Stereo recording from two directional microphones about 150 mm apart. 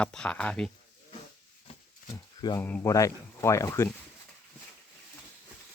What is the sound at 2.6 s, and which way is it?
Speech, 10° left (ahead or behind).